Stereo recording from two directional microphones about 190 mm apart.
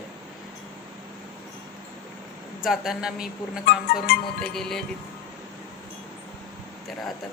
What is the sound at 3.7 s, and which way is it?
Music, 50° left (ahead or behind).